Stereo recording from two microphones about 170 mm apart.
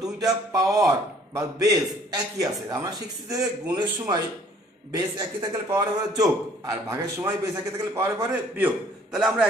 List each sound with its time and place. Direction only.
0.0 s a man's voice: 20° right (ahead or behind); by 9.5 s 5° right (ahead or behind)